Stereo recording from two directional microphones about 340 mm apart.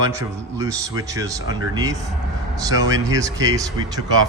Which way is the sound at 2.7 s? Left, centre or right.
Centre.